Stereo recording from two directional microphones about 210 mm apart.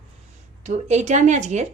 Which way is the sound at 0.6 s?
35° right (ahead or behind).